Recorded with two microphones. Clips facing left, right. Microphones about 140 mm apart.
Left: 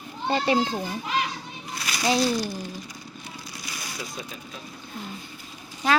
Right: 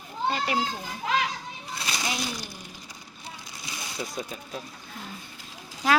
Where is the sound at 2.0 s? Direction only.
35° left (ahead or behind).